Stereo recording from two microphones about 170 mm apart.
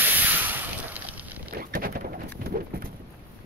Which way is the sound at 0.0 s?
10° right (ahead or behind).